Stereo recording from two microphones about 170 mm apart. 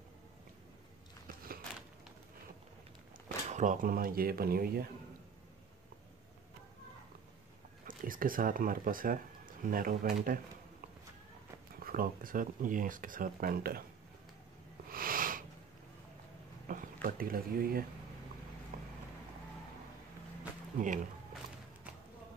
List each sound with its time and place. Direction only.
1.2 s a sound: 60° right (ahead or behind)
3.4 s speech: 45° right (ahead or behind); by 4.8 s 60° right (ahead or behind)
7.8 s speech: 55° right (ahead or behind)
11.8 s speech: 60° right (ahead or behind)
14.9 s sniff: 55° right (ahead or behind)
16.6 s speech: 55° right (ahead or behind)
18.7 s vehicle: 55° right (ahead or behind)
20.8 s speech: 50° right (ahead or behind)